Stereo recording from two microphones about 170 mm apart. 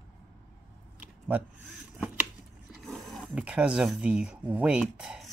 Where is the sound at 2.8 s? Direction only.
Centre (ahead or behind).